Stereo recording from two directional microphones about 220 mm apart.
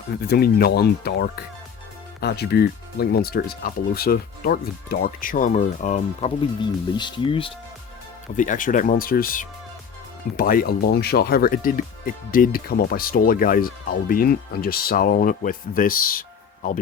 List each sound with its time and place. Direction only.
0.2 s speech: 45° left (ahead or behind); by 7.5 s 25° left (ahead or behind)
8.4 s speech: 35° left (ahead or behind)